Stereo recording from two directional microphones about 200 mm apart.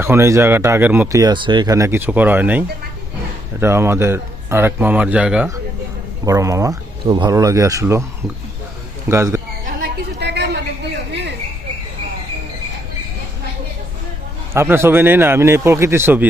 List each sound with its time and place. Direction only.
0.0 s speech: 15° right (ahead or behind)
6.2 s speech: 15° right (ahead or behind)
9.0 s speech: 15° right (ahead or behind)
9.6 s a sound: 50° right (ahead or behind)
11.1 s cricket: 60° right (ahead or behind)
14.5 s speech: 15° right (ahead or behind)